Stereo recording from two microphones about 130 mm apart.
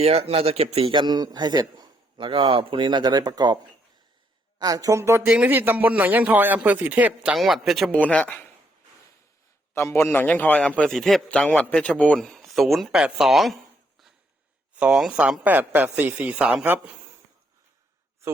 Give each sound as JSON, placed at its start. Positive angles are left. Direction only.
{"t": 0.0, "sound": "speech", "side_deg": -50}
{"t": 0.9, "sound": "a man's voice", "side_deg": -35}
{"t": 4.6, "sound": "a man's voice", "side_deg": -30}
{"t": 7.9, "sound": "a man's voice", "side_deg": 10}
{"t": 9.7, "sound": "a man's voice", "side_deg": 20}
{"t": 14.8, "sound": "a man's voice", "side_deg": -5}